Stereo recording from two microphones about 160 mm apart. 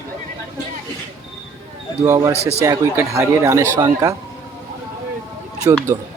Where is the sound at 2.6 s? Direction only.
15° right (ahead or behind).